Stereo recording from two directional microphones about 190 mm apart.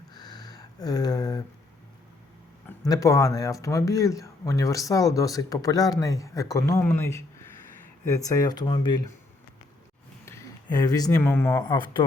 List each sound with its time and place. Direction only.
0.1 s a sound: 20° left (ahead or behind)
2.6 s speech: 15° left (ahead or behind)
10.2 s speech: 15° left (ahead or behind)